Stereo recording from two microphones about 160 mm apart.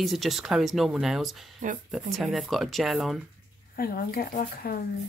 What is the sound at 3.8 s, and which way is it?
Speech, 65° left (ahead or behind).